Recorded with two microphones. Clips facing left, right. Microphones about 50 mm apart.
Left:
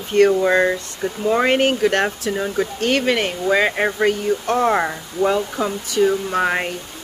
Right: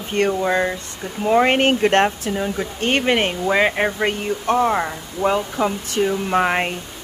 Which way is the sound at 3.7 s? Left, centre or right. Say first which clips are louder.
Left 1 dB; centre.